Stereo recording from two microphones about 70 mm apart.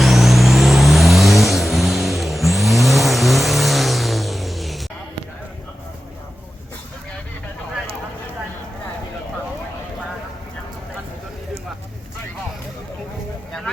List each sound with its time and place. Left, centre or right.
0.0 s vehicle: centre